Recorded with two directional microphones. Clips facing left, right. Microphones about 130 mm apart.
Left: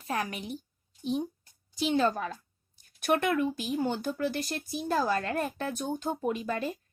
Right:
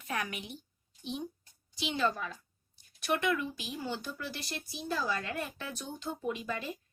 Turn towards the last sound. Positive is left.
turn(degrees=50)  # may be behind; listen again after turning